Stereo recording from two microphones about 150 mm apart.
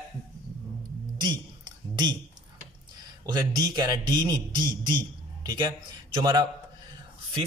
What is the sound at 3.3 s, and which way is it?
A man's voice, 30° right (ahead or behind).